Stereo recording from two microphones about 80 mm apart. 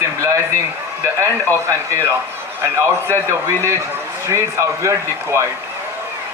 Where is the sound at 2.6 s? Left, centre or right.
Right.